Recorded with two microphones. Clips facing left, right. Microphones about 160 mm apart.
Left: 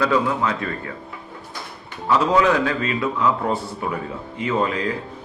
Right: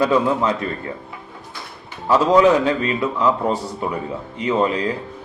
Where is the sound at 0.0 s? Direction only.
20° right (ahead or behind).